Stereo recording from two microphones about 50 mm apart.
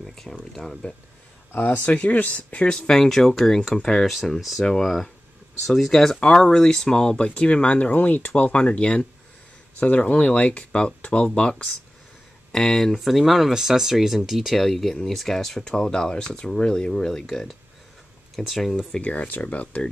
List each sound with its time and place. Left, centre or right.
0.0 s speech: centre
1.5 s speech: left
1.9 s speech: left
2.7 s speech: centre
4.1 s speech: centre; by 11.7 s left
12.5 s speech: centre
18.5 s speech: centre
18.9 s speech: left